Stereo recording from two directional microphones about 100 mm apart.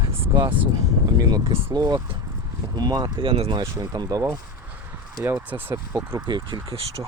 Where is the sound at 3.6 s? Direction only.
45° right (ahead or behind).